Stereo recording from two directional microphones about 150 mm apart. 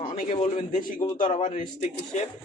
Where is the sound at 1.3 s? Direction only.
50° left (ahead or behind).